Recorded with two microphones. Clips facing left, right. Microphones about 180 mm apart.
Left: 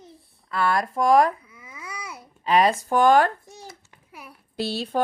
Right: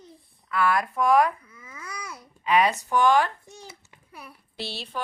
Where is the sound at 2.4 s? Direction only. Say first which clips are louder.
Left 2 dB; 35° left (ahead or behind).